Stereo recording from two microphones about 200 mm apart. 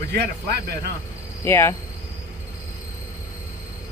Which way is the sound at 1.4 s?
10° left (ahead or behind).